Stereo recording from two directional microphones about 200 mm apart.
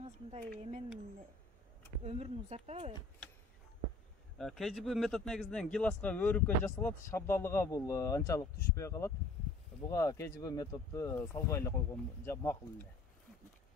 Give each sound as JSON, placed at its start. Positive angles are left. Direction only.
{"t": 0.3, "sound": "speech", "side_deg": -35}
{"t": 2.0, "sound": "speech", "side_deg": -30}
{"t": 4.4, "sound": "a man's voice", "side_deg": 0}